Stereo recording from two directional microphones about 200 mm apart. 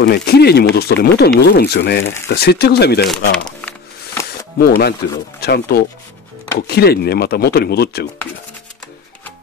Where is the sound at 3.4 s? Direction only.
5° left (ahead or behind).